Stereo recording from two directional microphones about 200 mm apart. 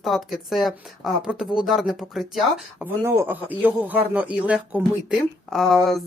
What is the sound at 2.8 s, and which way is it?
Speech, 15° right (ahead or behind).